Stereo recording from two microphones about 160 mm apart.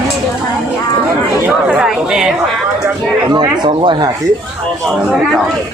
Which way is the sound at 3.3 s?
30° right (ahead or behind).